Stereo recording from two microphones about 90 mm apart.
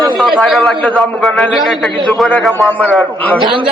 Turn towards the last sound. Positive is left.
turn(degrees=15)  # may be behind; listen again after turning